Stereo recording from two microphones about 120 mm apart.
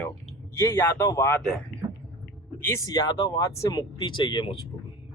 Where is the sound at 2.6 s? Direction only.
25° left (ahead or behind).